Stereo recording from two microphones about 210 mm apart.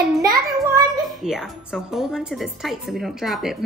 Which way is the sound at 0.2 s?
15° right (ahead or behind).